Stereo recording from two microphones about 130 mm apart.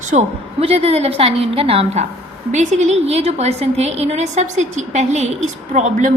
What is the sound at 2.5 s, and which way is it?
A woman's voice, 65° right (ahead or behind).